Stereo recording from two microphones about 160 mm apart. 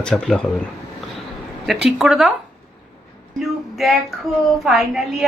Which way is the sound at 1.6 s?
Centre (ahead or behind).